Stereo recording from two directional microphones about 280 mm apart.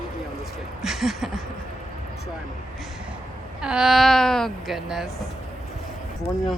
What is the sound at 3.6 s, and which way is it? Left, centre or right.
A woman's voice, centre.